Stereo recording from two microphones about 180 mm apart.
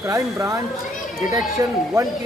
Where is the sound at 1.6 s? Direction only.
15° right (ahead or behind).